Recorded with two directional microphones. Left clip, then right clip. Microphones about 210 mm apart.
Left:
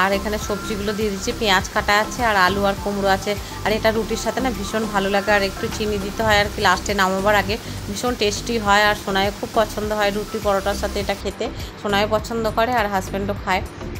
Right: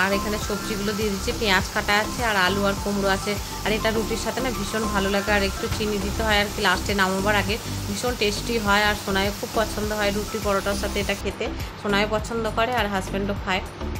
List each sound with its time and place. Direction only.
0.8 s a woman's voice: 15° left (ahead or behind)